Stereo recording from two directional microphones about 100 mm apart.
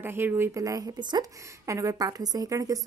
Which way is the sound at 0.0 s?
20° right (ahead or behind).